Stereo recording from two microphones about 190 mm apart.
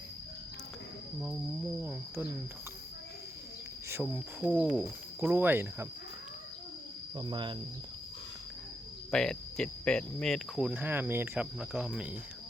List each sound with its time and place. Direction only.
1.8 s cricket: 10° right (ahead or behind)
3.8 s speech: 10° right (ahead or behind)
7.2 s speech: 25° right (ahead or behind)
9.1 s speech: 5° left (ahead or behind)